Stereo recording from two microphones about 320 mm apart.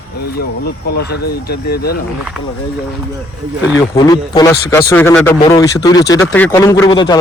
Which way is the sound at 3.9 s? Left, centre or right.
Centre.